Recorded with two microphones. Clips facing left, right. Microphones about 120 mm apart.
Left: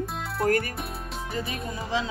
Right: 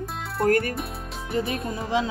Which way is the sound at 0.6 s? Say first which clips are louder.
Right 4 dB; centre (ahead or behind).